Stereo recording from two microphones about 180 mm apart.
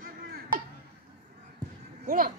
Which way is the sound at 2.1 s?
55° right (ahead or behind).